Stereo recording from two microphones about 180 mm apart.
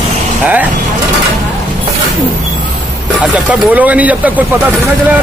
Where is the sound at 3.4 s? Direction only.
10° right (ahead or behind).